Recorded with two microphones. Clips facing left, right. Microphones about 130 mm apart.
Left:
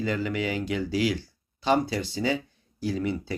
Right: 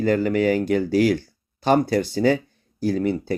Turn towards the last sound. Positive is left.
turn(degrees=-45)  # may be behind; listen again after turning